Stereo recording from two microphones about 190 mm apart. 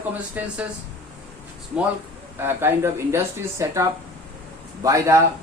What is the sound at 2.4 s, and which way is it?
Speech, 10° right (ahead or behind).